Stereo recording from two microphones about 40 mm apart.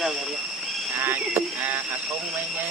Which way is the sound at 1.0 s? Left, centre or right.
Right.